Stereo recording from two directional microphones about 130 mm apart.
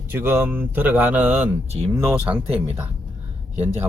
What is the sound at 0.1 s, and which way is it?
Speech, 15° right (ahead or behind).